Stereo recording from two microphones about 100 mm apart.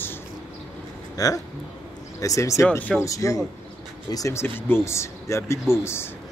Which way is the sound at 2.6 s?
15° left (ahead or behind).